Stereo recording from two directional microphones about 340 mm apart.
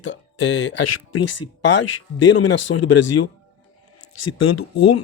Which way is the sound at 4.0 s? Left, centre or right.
Left.